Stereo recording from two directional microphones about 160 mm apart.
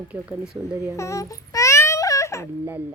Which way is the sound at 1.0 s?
20° left (ahead or behind).